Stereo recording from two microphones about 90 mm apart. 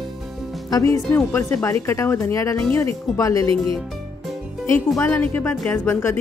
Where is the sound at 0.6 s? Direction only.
45° left (ahead or behind).